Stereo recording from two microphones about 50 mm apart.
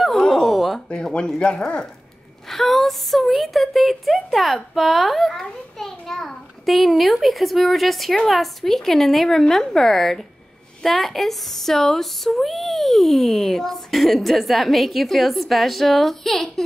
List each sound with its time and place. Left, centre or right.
0.0 s a sound: centre
0.8 s speech: centre
2.5 s a child's voice: centre